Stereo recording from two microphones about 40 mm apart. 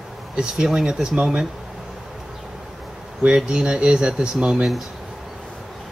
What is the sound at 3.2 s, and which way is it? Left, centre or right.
Speech, right.